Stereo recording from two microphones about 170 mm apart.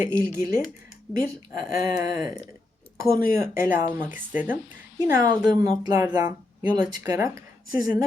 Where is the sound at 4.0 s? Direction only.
10° right (ahead or behind).